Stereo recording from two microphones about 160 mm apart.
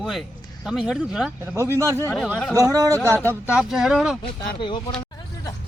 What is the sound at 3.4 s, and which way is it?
Speech, 5° right (ahead or behind).